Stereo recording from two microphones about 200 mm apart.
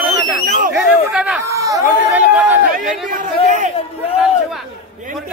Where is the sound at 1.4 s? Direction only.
15° right (ahead or behind).